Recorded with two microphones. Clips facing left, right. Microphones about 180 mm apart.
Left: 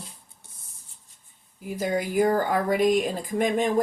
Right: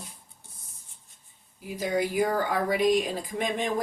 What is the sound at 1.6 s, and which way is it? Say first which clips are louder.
Speech: left 1 dB; 45° left (ahead or behind).